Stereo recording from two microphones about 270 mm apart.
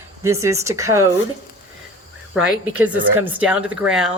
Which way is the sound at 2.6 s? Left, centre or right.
Centre.